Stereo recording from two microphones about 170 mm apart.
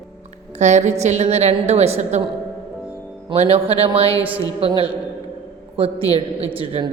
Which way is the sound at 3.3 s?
35° right (ahead or behind).